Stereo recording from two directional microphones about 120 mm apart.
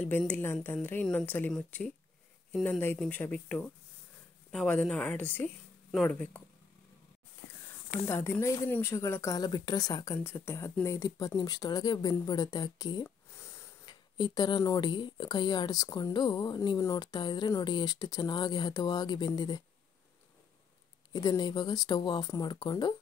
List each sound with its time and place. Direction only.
0.3 s a woman's voice: 20° left (ahead or behind)
3.0 s a woman's voice: 10° left (ahead or behind)
8.1 s a woman's voice: 20° left (ahead or behind)
13.3 s a sound: 20° left (ahead or behind)
13.8 s a sound: 40° left (ahead or behind)
14.6 s speech: 35° left (ahead or behind)
21.1 s speech: 35° left (ahead or behind)